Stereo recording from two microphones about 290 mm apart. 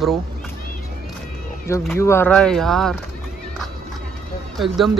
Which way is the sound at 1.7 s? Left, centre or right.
Centre.